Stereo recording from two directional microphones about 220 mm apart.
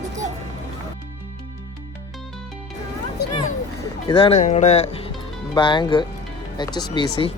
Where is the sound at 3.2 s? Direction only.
50° left (ahead or behind).